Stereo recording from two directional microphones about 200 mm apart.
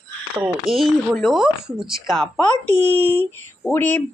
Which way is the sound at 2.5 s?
25° left (ahead or behind).